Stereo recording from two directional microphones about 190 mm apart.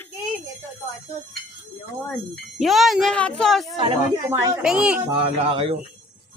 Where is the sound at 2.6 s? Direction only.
Centre (ahead or behind).